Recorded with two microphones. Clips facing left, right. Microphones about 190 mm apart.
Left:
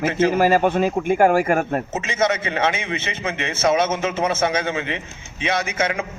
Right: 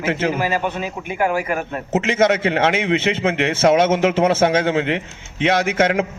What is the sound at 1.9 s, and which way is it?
A man's voice, 65° right (ahead or behind).